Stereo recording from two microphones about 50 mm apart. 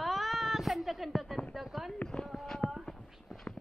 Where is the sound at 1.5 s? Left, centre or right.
Centre.